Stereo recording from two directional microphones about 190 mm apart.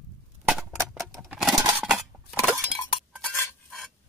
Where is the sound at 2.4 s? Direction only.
Centre (ahead or behind).